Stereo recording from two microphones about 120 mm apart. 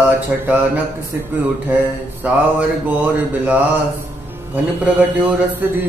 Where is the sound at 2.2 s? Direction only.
10° right (ahead or behind).